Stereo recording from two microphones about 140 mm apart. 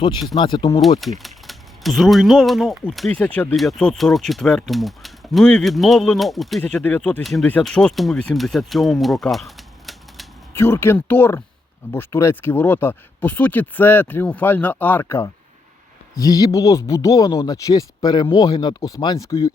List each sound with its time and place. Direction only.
0.3 s speech: 35° left (ahead or behind)
0.9 s speech: centre (ahead or behind)
7.2 s speech: centre (ahead or behind)
10.5 s speech: 15° left (ahead or behind)
16.1 s speech: 25° left (ahead or behind)